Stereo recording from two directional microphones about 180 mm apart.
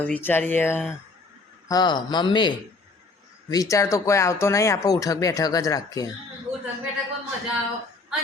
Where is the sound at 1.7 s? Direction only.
20° left (ahead or behind).